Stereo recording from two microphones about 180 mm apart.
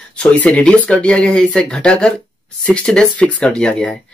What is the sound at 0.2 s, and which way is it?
Speech, 5° left (ahead or behind).